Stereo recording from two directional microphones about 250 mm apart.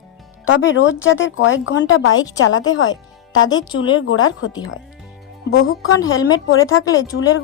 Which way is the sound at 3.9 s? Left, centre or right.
Left.